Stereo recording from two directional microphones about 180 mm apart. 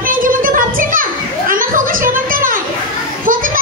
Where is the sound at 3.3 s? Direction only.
50° right (ahead or behind).